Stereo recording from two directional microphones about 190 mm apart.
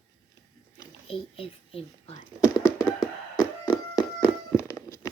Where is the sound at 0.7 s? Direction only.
30° left (ahead or behind).